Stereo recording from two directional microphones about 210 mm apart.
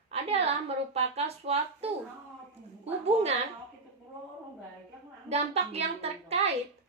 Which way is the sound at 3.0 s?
30° right (ahead or behind).